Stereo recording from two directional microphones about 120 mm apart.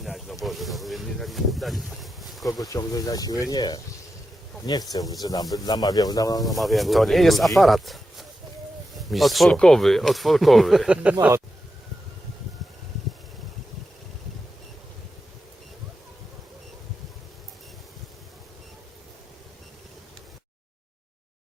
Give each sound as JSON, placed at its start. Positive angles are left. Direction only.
{"t": 0.0, "sound": "speech", "side_deg": 0}
{"t": 2.6, "sound": "speech", "side_deg": 30}
{"t": 6.4, "sound": "speech", "side_deg": 0}